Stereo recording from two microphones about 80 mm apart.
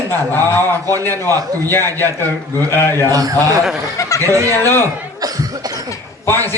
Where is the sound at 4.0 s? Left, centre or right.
Left.